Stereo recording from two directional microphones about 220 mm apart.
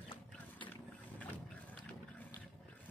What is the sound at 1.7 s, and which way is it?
Water, 5° left (ahead or behind).